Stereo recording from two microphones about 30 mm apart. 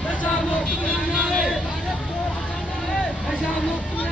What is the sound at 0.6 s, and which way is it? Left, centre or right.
Vehicle, left.